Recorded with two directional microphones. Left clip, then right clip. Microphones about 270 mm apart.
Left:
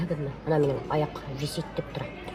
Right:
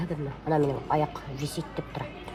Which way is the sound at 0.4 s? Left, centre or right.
Centre.